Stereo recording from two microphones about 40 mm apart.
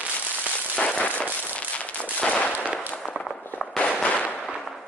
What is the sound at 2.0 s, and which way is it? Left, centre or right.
Gunshot, left.